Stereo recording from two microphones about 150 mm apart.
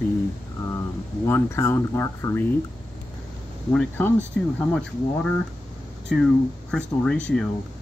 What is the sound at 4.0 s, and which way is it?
Speech, 10° left (ahead or behind).